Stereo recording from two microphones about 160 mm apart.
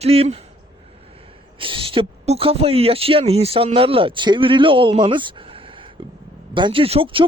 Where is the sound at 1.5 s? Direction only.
35° right (ahead or behind).